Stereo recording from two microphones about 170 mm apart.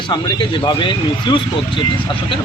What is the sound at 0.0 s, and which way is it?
A man's voice, 30° left (ahead or behind).